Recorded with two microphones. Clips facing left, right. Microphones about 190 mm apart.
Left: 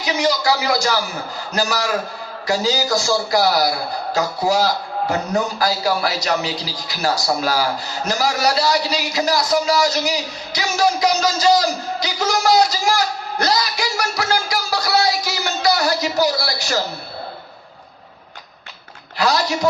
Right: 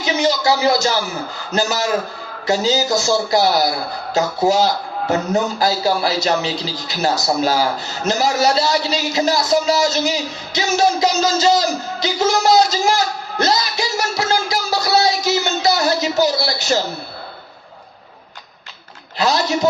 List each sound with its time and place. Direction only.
0.0 s a man's voice: 25° right (ahead or behind)
19.2 s a man's voice: 25° right (ahead or behind)